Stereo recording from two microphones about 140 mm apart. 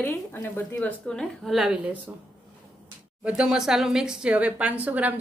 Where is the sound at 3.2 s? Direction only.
5° right (ahead or behind).